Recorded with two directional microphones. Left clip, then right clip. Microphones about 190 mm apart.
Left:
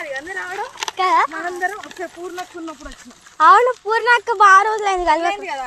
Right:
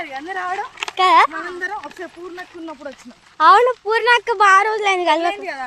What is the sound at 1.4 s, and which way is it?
Speech, 20° right (ahead or behind).